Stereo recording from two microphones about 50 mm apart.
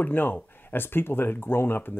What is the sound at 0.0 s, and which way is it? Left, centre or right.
Speech, left.